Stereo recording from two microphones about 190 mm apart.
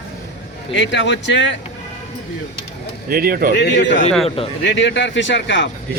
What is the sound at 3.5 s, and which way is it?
Speech, 65° left (ahead or behind).